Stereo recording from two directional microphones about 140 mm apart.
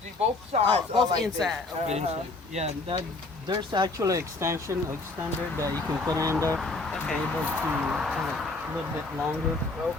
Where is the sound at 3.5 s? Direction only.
35° right (ahead or behind).